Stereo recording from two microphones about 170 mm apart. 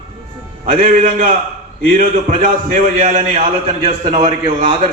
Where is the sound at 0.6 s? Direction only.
55° right (ahead or behind).